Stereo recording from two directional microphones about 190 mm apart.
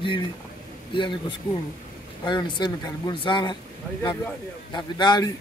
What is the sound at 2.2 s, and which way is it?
Speech, 25° left (ahead or behind).